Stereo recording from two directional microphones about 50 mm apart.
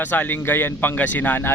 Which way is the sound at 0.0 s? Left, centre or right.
Left.